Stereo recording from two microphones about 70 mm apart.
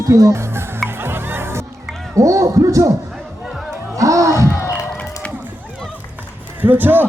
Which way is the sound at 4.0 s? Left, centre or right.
Right.